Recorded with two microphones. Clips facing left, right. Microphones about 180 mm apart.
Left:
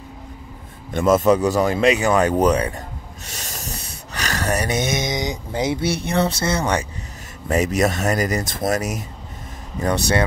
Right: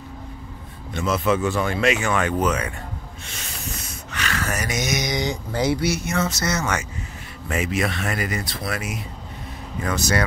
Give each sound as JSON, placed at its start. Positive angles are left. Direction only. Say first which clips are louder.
{"t": 0.9, "sound": "speech", "louder": "left 6 dB", "side_deg": 45}
{"t": 3.3, "sound": "a sound", "louder": "left 2 dB", "side_deg": 40}
{"t": 7.4, "sound": "speech", "louder": "left 5 dB", "side_deg": 40}